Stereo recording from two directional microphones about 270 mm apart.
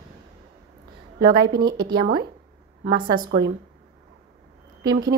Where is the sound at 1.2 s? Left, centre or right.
Right.